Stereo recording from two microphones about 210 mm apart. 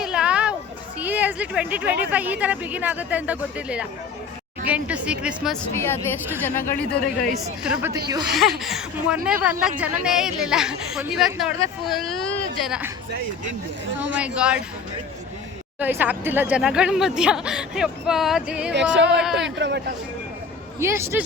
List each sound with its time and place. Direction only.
0.0 s music: 5° right (ahead or behind)
0.9 s a woman's voice: 10° right (ahead or behind)
5.7 s speech: 10° left (ahead or behind)
7.6 s a woman's voice: 5° right (ahead or behind)
14.1 s speech: 5° right (ahead or behind)
15.8 s speech: 10° right (ahead or behind)
18.7 s speech: 55° right (ahead or behind)
19.2 s speech: centre (ahead or behind)
19.5 s speech: 55° right (ahead or behind)
20.7 s a woman's voice: 10° right (ahead or behind)